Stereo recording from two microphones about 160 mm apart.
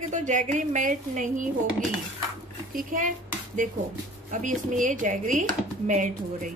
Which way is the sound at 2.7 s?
60° right (ahead or behind).